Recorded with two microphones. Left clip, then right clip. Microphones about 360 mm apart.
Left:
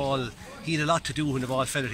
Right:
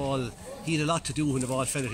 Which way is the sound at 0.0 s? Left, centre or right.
Centre.